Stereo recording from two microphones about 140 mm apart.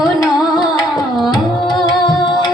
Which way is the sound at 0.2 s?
30° left (ahead or behind).